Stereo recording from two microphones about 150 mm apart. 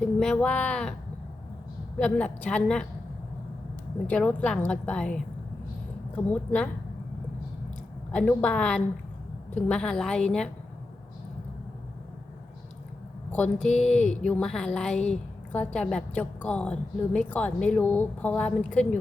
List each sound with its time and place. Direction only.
0.0 s a woman's voice: 5° left (ahead or behind)
2.0 s a woman's voice: 10° left (ahead or behind)
4.0 s a woman's voice: 10° left (ahead or behind)
8.1 s a woman's voice: 10° left (ahead or behind)
13.3 s a woman's voice: 5° left (ahead or behind)